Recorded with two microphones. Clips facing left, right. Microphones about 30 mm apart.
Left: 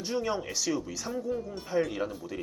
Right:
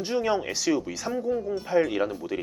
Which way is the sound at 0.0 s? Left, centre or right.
Right.